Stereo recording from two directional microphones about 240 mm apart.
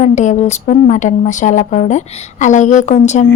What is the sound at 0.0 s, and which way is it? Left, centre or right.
A woman's voice, left.